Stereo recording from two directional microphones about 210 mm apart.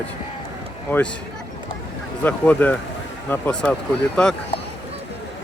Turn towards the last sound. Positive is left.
turn(degrees=5)  # may be behind; listen again after turning